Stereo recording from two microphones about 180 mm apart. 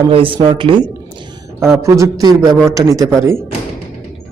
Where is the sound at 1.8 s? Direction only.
15° right (ahead or behind).